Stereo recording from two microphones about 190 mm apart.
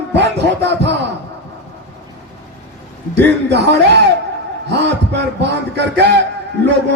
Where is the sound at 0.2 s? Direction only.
65° right (ahead or behind).